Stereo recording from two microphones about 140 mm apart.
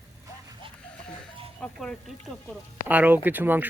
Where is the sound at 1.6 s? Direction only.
5° left (ahead or behind).